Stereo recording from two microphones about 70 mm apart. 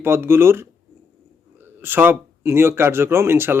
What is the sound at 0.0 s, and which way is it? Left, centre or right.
Speech, right.